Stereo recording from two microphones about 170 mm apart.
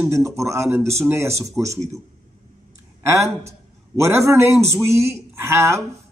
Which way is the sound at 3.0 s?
15° right (ahead or behind).